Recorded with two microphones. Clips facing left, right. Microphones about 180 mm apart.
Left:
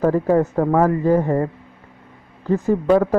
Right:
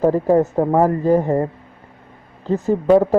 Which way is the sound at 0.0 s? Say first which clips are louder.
Right 2 dB; 20° right (ahead or behind).